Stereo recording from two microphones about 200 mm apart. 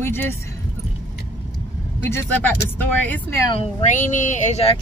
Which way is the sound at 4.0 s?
40° left (ahead or behind).